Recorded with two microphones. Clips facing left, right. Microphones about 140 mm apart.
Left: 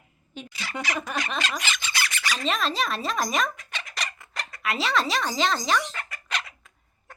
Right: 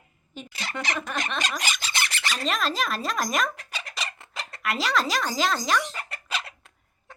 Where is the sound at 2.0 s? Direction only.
35° right (ahead or behind).